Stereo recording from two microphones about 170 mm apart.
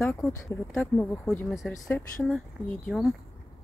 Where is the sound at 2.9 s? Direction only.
Centre (ahead or behind).